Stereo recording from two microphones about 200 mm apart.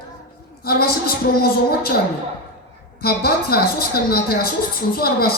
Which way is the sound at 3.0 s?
50° left (ahead or behind).